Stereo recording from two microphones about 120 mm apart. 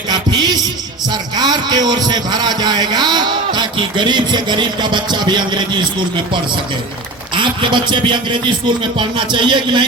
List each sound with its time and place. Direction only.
0.1 s music: 35° right (ahead or behind)
1.1 s a man's voice: 35° right (ahead or behind)
7.3 s a man's voice: 40° right (ahead or behind)